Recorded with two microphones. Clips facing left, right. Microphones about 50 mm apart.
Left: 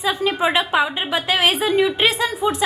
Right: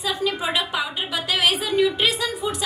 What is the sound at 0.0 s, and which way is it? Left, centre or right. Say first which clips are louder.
A woman's voice: left 5 dB; left.